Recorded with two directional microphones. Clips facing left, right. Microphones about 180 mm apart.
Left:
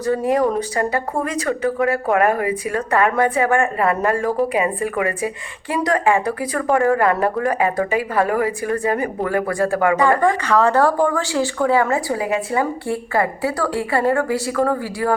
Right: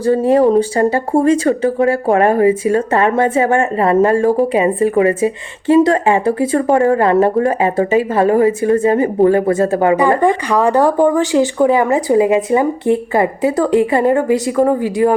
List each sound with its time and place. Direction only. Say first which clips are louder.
0.0 s speech: right 6 dB; 30° right (ahead or behind)